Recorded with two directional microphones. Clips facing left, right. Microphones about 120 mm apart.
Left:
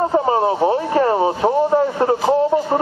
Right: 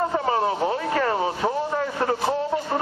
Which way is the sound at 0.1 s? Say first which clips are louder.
Left 6 dB; 30° left (ahead or behind).